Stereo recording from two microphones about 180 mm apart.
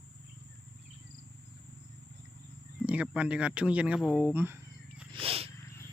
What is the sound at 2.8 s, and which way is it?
Speech, 5° right (ahead or behind).